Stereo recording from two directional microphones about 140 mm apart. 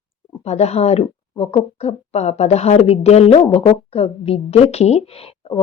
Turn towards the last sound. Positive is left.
turn(degrees=45)  # may be behind; listen again after turning